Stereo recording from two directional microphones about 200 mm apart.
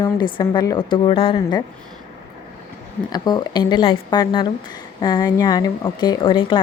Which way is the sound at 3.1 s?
20° left (ahead or behind).